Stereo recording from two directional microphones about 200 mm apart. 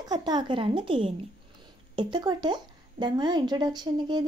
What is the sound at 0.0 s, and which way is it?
Speech, 20° right (ahead or behind).